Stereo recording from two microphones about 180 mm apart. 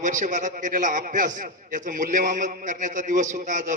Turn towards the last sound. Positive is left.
turn(degrees=-45)  # may be behind; listen again after turning